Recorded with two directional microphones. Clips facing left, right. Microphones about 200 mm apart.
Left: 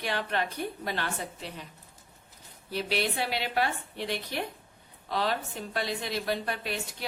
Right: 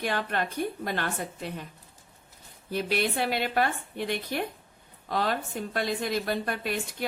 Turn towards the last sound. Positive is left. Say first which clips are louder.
# right 2 dB
turn(degrees=-50)  # may be behind; listen again after turning